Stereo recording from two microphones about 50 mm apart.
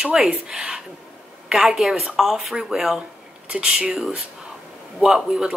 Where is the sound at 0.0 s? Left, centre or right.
Centre.